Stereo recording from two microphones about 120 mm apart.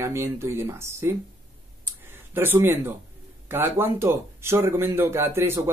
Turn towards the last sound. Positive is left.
turn(degrees=-20)  # may be behind; listen again after turning